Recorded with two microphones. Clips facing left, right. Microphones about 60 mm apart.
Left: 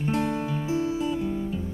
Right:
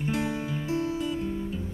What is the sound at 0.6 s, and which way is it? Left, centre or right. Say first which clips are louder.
Music: left 1 dB; centre.